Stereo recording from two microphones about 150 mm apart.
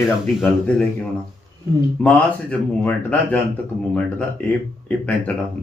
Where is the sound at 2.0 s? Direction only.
10° left (ahead or behind).